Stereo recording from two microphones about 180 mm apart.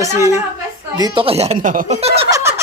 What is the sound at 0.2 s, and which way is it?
Speech, 15° right (ahead or behind).